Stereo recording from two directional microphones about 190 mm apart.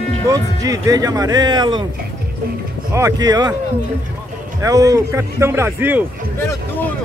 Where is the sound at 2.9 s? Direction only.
20° right (ahead or behind).